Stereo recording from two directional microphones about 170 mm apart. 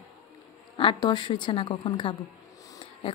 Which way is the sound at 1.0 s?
25° left (ahead or behind).